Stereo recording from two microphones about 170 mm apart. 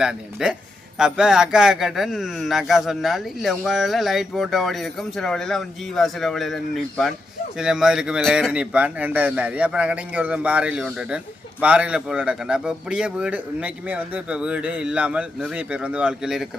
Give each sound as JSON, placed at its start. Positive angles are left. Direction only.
{"t": 0.0, "sound": "a man's voice", "side_deg": -5}